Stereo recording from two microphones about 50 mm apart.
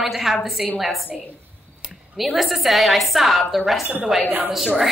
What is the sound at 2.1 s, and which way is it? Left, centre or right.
A woman's voice, centre.